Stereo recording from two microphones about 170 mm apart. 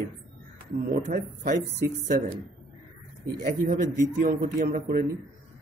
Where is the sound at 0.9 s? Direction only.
55° right (ahead or behind).